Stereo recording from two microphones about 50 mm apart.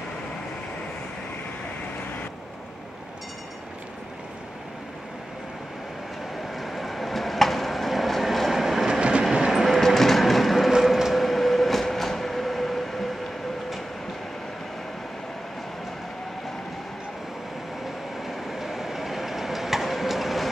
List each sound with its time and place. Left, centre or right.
6.5 s vehicle: centre
9.3 s train: centre
18.2 s train: centre